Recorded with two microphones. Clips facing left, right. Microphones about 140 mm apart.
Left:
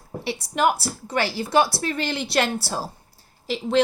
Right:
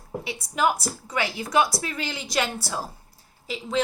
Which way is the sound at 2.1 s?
65° left (ahead or behind).